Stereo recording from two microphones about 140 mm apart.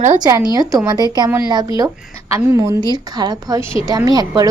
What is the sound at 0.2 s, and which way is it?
A woman's voice, 30° right (ahead or behind).